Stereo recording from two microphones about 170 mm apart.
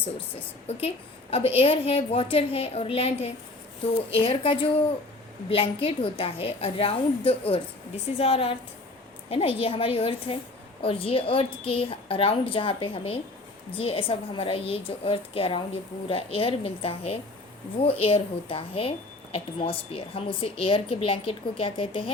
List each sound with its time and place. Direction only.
0.7 s a woman's voice: 35° left (ahead or behind)